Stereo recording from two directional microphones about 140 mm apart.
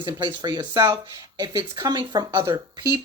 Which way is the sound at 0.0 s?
35° right (ahead or behind).